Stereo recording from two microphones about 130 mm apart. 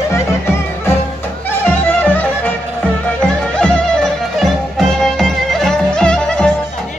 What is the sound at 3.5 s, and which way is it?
Music, 5° left (ahead or behind).